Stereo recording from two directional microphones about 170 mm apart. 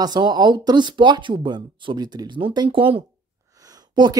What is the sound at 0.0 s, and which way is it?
Speech, 25° right (ahead or behind).